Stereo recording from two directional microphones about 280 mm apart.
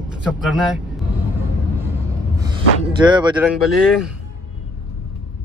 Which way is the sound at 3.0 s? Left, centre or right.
Centre.